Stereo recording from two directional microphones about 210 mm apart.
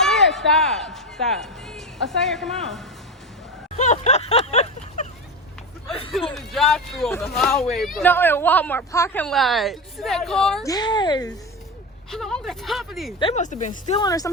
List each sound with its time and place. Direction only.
0.0 s speech: centre (ahead or behind)
3.8 s a sound: 35° left (ahead or behind)
6.3 s speech: centre (ahead or behind)
10.6 s speech: 20° left (ahead or behind)
12.1 s speech: centre (ahead or behind)
13.1 s speech: 30° left (ahead or behind)
14.0 s speech: 15° left (ahead or behind)